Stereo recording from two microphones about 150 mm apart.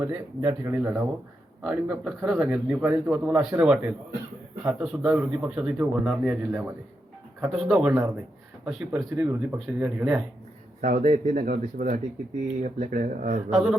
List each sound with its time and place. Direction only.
0.0 s speech: 15° right (ahead or behind)
1.6 s a man's voice: centre (ahead or behind)
10.8 s speech: 60° right (ahead or behind)
11.4 s speech: 70° right (ahead or behind)
12.5 s speech: 55° right (ahead or behind)